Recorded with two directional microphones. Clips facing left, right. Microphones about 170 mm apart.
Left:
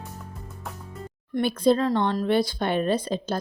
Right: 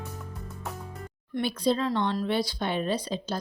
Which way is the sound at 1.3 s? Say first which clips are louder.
Left 5 dB; 50° left (ahead or behind).